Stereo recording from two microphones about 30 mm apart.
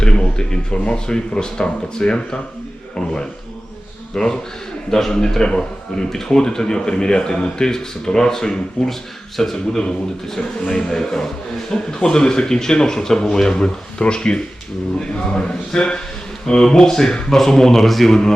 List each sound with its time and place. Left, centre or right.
0.0 s speech: left
4.1 s a man's voice: left
5.5 s a man's voice: left
10.8 s a man's voice: left
11.0 s a man's voice: centre
18.1 s a man's voice: centre